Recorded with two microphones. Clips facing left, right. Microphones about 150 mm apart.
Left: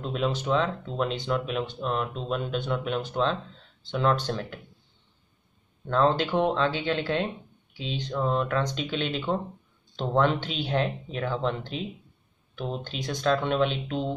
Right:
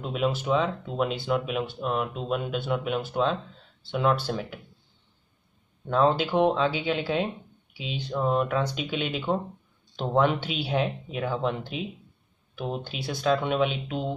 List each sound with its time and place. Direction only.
0.0 s speech: 5° right (ahead or behind)
5.9 s speech: 10° right (ahead or behind)